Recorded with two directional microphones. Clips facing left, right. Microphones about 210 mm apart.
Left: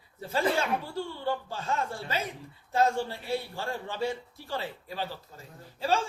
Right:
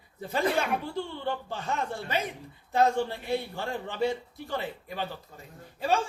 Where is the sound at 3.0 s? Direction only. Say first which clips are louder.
Right 2 dB; 20° right (ahead or behind).